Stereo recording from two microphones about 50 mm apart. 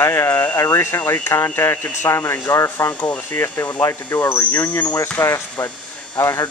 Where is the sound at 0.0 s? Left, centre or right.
Left.